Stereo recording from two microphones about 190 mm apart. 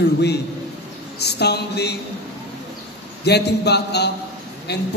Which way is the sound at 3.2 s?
60° left (ahead or behind).